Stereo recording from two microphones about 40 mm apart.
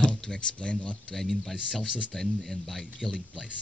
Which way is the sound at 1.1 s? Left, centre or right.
Centre.